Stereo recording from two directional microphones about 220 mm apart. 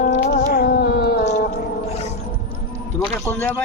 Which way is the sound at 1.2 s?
30° left (ahead or behind).